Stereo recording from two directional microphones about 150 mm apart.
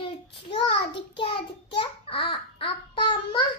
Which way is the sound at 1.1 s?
35° left (ahead or behind).